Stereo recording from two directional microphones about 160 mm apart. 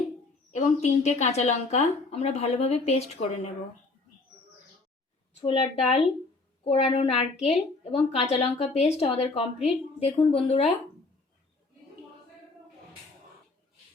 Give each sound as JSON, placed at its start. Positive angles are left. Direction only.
{"t": 0.5, "sound": "a woman's voice", "side_deg": 45}
{"t": 5.4, "sound": "a woman's voice", "side_deg": 40}